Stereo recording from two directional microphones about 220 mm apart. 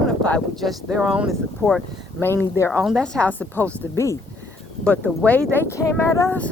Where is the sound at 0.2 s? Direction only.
5° left (ahead or behind).